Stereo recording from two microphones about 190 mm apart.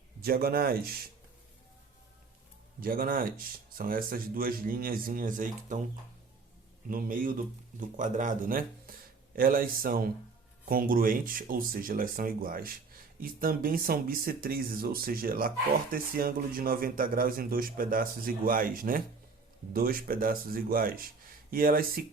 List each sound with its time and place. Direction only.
0.2 s speech: 50° right (ahead or behind)
2.8 s speech: 50° right (ahead or behind)
6.8 s speech: 50° right (ahead or behind)